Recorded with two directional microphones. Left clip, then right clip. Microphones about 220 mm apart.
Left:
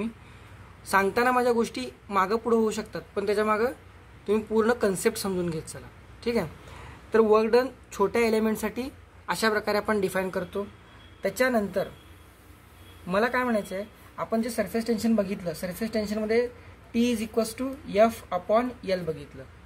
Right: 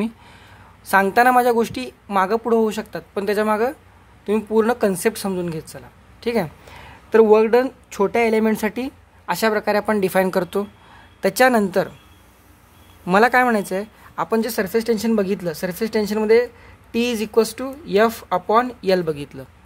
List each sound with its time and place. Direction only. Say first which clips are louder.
0.8 s a woman's voice: right 8 dB; 30° right (ahead or behind); by 11.9 s 50° right (ahead or behind)
13.0 s a woman's voice: right 10 dB; 50° right (ahead or behind)